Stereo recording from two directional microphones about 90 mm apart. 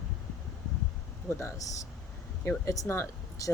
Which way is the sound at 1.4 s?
40° left (ahead or behind).